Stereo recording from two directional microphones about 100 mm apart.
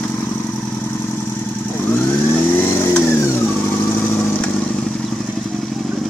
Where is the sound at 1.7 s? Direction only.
20° left (ahead or behind).